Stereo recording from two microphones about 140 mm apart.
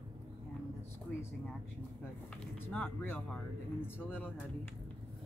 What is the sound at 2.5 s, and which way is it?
Speech, 15° left (ahead or behind).